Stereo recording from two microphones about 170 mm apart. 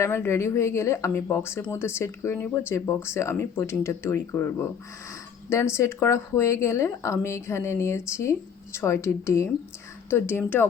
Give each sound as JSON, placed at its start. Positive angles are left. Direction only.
{"t": 0.0, "sound": "speech", "side_deg": 15}